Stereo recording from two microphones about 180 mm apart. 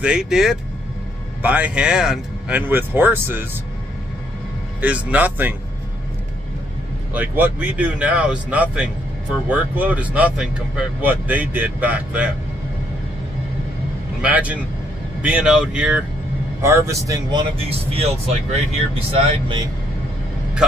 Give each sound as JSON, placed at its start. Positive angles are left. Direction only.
{"t": 0.0, "sound": "speech", "side_deg": -5}
{"t": 4.8, "sound": "speech", "side_deg": -10}
{"t": 7.2, "sound": "speech", "side_deg": -10}
{"t": 14.2, "sound": "speech", "side_deg": -10}
{"t": 16.6, "sound": "speech", "side_deg": -15}